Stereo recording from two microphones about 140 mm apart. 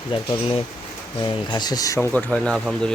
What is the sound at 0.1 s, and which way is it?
Speech, 35° left (ahead or behind).